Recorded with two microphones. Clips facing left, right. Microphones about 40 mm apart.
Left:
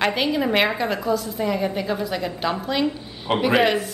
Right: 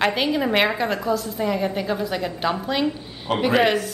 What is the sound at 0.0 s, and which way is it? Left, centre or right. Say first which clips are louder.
A woman's voice: even; centre.